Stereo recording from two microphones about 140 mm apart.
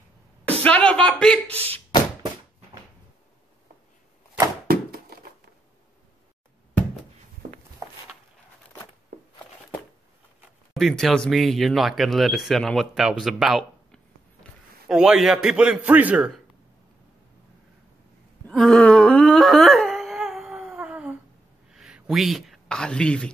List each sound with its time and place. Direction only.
0.5 s speech: 10° left (ahead or behind)
1.5 s speech: 45° right (ahead or behind)
4.6 s a sound: 90° right
10.7 s a man's voice: centre (ahead or behind)
18.5 s wail: 5° left (ahead or behind)
21.6 s speech: 5° right (ahead or behind)